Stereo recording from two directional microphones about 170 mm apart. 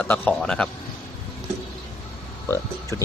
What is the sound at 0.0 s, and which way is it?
Speech, 10° left (ahead or behind).